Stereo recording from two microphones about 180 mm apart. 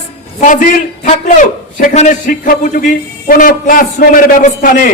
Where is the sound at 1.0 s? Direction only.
50° left (ahead or behind).